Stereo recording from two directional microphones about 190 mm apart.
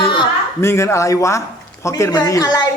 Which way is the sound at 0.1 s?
20° left (ahead or behind).